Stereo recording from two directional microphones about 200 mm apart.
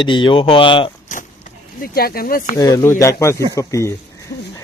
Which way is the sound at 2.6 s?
20° left (ahead or behind).